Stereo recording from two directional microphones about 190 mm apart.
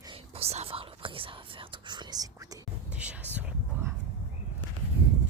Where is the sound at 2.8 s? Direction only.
5° right (ahead or behind).